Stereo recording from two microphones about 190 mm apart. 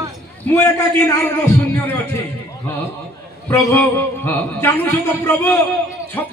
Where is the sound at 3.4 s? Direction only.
10° left (ahead or behind).